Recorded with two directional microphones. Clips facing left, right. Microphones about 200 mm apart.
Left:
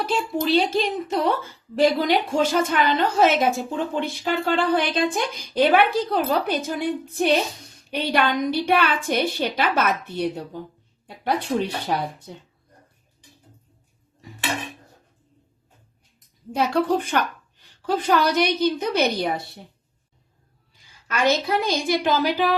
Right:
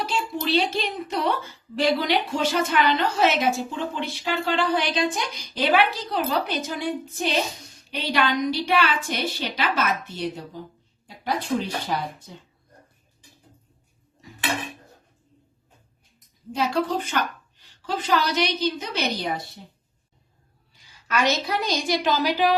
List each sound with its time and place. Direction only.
0.0 s a woman's voice: 50° left (ahead or behind)
11.0 s a sound: 60° left (ahead or behind)
11.9 s a woman's voice: 60° left (ahead or behind)
16.6 s a woman's voice: 60° left (ahead or behind)
21.1 s a woman's voice: 55° left (ahead or behind)